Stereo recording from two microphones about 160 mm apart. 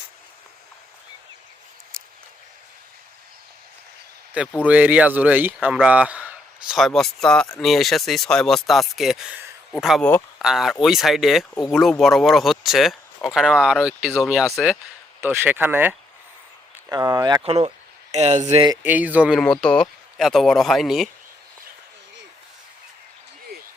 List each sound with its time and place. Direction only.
4.6 s speech: 10° right (ahead or behind)
10.0 s speech: 10° left (ahead or behind)
10.4 s speech: centre (ahead or behind)
16.9 s speech: 25° right (ahead or behind)
18.1 s speech: 45° right (ahead or behind)
18.8 s speech: 10° right (ahead or behind)
19.4 s speech: 5° left (ahead or behind)